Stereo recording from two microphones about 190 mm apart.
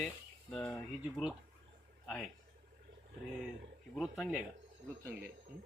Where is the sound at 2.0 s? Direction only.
Centre (ahead or behind).